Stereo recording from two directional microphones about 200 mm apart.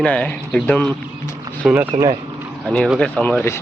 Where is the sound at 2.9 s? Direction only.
5° left (ahead or behind).